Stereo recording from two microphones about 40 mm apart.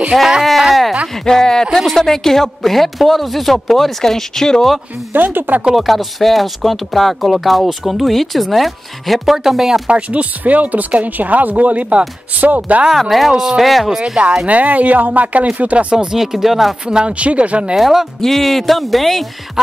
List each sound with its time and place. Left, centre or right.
0.4 s speech: centre
1.2 s speech: centre
5.1 s speech: right
5.8 s speech: centre
9.8 s speech: right
12.9 s speech: centre
13.8 s speech: right
14.4 s speech: right
16.2 s speech: centre
16.9 s speech: right
17.7 s speech: centre
18.2 s speech: centre